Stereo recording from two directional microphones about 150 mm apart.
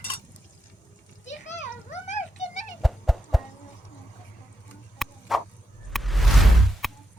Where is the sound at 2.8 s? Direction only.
Centre (ahead or behind).